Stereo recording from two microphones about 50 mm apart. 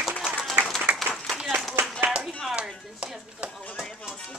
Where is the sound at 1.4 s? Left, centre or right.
Centre.